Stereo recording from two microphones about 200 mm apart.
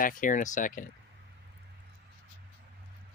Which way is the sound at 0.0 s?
40° left (ahead or behind).